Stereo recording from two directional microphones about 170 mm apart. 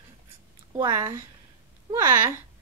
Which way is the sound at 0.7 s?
20° right (ahead or behind).